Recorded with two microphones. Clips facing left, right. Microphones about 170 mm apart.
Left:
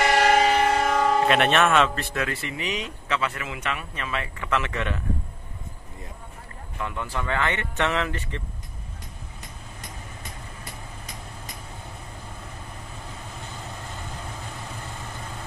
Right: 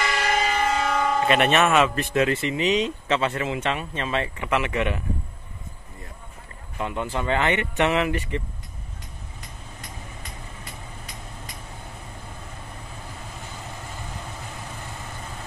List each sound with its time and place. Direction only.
0.0 s train: 65° left (ahead or behind)
0.8 s a sound: 45° left (ahead or behind)
1.2 s speech: centre (ahead or behind)
2.0 s speech: 20° right (ahead or behind)
4.5 s speech: 15° right (ahead or behind)
6.8 s speech: 20° right (ahead or behind)